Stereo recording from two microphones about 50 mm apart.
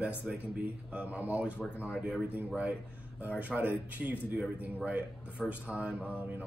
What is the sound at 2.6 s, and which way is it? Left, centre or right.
Speech, right.